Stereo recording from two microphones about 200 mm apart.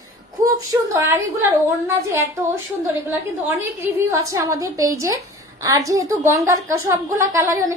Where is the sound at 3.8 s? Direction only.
15° right (ahead or behind).